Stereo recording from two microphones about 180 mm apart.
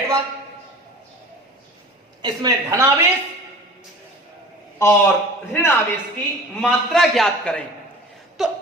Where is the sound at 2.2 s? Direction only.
20° right (ahead or behind).